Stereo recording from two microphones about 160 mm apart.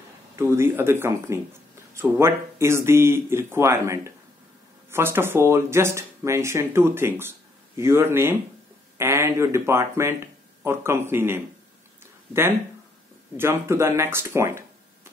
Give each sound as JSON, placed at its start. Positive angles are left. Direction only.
{"t": 0.4, "sound": "speech", "side_deg": -15}
{"t": 13.4, "sound": "speech", "side_deg": -15}